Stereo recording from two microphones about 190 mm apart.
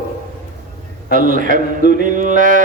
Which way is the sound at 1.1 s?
45° right (ahead or behind).